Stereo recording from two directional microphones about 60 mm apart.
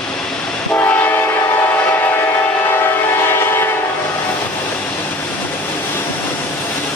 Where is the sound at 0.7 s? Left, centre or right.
Left.